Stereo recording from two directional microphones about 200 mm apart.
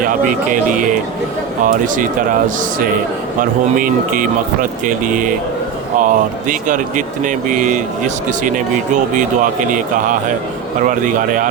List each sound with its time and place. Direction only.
0.0 s speech: 40° right (ahead or behind)
3.4 s speech: 40° right (ahead or behind)